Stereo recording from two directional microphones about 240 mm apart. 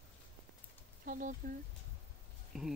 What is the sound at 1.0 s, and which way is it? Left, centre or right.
Speech, right.